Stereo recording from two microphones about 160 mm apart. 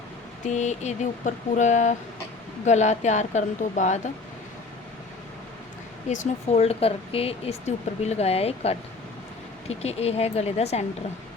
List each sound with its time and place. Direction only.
0.4 s speech: 45° left (ahead or behind)
6.1 s speech: 45° left (ahead or behind)